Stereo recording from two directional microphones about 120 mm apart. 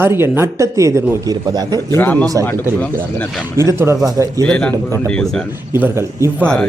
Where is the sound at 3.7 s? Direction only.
25° right (ahead or behind).